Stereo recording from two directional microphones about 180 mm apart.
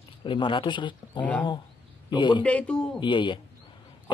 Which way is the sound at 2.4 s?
5° left (ahead or behind).